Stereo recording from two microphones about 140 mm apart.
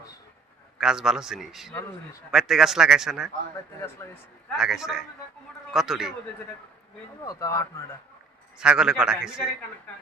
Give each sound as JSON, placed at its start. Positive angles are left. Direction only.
{"t": 0.8, "sound": "speech", "side_deg": -5}
{"t": 4.0, "sound": "a man's voice", "side_deg": 15}
{"t": 4.5, "sound": "speech", "side_deg": -5}
{"t": 7.3, "sound": "speech", "side_deg": 25}
{"t": 8.5, "sound": "speech", "side_deg": -5}